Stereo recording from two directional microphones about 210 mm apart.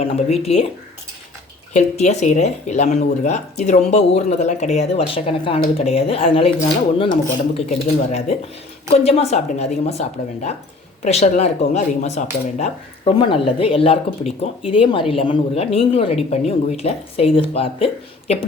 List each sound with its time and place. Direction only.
0.0 s a woman's voice: 30° left (ahead or behind)
1.7 s speech: 35° left (ahead or behind)
7.5 s a woman's voice: 30° left (ahead or behind)